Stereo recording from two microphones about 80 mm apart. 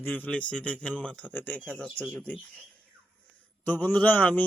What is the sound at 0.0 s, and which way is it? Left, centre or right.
A man's voice, left.